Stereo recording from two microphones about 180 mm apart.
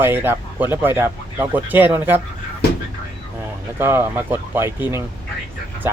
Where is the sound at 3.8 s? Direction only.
10° right (ahead or behind).